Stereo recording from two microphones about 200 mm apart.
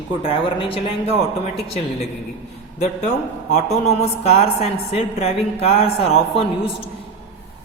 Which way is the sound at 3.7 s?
30° left (ahead or behind).